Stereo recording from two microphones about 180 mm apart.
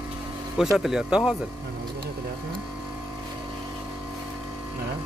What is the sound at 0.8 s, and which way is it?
Speech, 5° right (ahead or behind).